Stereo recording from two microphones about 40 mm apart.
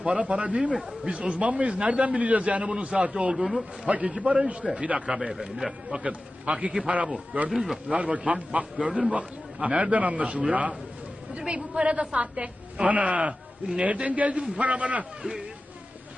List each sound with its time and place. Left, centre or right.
0.0 s a woman's voice: right
3.3 s a man's voice: centre
3.8 s a man's voice: right
7.5 s a man's voice: centre
7.9 s a man's voice: right
8.9 s a man's voice: centre
9.1 s a man's voice: right
15.2 s a woman's voice: centre